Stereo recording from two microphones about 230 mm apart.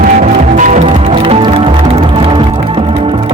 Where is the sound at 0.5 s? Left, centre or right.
Right.